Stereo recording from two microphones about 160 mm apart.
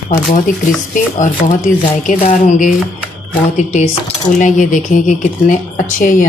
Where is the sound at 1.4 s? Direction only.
50° left (ahead or behind).